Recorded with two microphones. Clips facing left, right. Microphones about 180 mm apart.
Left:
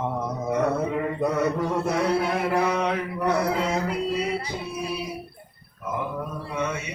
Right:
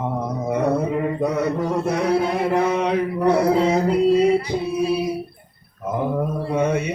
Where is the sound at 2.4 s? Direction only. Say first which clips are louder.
Right 4 dB; 20° right (ahead or behind); by 4.3 s 35° right (ahead or behind).